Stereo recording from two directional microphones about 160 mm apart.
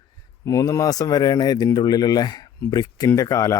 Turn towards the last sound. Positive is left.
turn(degrees=20)  # may be behind; listen again after turning